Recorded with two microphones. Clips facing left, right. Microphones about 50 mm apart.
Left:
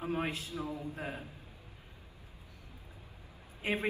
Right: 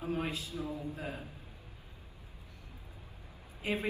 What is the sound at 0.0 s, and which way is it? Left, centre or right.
A man's voice, left.